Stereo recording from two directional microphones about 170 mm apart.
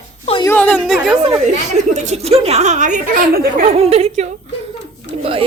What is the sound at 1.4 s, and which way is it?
A woman's voice, 45° right (ahead or behind).